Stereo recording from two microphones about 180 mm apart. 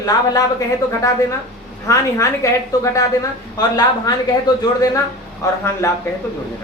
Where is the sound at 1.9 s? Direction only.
15° left (ahead or behind).